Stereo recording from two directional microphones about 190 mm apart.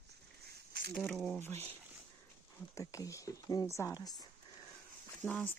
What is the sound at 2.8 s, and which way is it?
Speech, 15° left (ahead or behind).